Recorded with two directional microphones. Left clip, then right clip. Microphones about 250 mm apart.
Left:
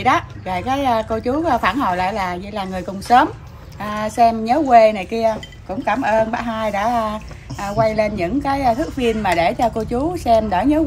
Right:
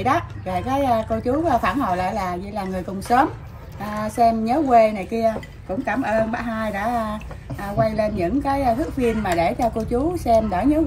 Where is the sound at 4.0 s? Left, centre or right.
Centre.